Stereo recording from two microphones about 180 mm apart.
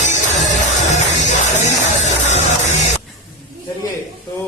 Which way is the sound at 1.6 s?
40° left (ahead or behind).